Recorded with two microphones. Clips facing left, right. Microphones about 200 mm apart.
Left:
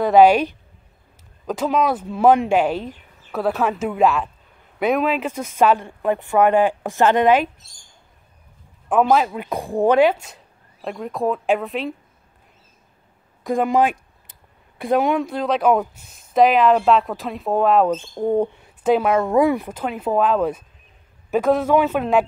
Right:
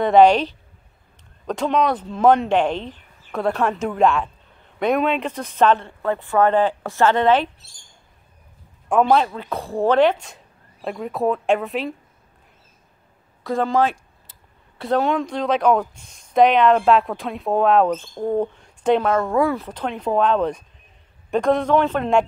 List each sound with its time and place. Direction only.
0.0 s speech: 5° left (ahead or behind)
8.8 s speech: centre (ahead or behind)
13.4 s a sound: 15° left (ahead or behind)
14.8 s speech: 15° left (ahead or behind)